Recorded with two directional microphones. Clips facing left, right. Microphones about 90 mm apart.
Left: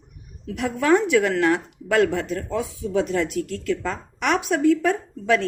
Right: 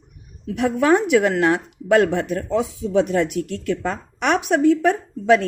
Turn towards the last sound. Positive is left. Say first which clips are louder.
# right 5 dB
turn(degrees=-25)  # may be behind; listen again after turning